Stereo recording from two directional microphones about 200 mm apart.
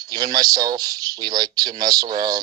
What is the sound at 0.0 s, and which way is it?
Speech, 20° right (ahead or behind).